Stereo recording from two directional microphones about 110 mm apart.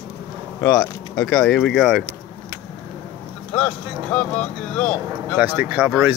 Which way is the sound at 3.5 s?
10° left (ahead or behind).